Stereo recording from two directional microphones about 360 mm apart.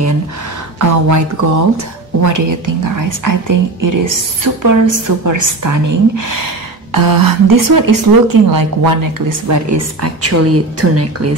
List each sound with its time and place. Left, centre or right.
0.7 s a woman's voice: right
6.9 s a woman's voice: right